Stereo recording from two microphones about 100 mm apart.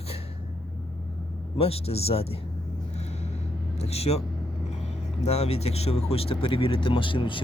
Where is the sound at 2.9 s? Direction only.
90° left.